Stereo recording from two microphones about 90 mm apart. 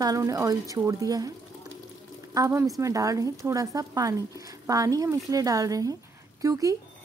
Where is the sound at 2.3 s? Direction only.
35° right (ahead or behind).